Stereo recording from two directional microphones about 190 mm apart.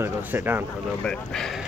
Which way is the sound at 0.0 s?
10° right (ahead or behind).